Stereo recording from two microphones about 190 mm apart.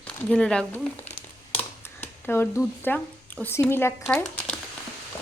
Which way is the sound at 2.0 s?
10° left (ahead or behind).